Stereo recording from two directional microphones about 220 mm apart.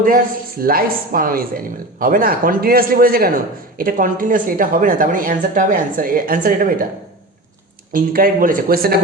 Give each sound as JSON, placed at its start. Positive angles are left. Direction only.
{"t": 0.6, "sound": "a man's voice", "side_deg": -40}
{"t": 7.9, "sound": "a man's voice", "side_deg": -40}